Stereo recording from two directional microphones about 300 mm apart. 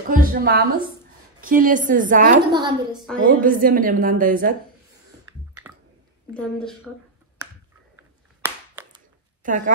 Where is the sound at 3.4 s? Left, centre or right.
Right.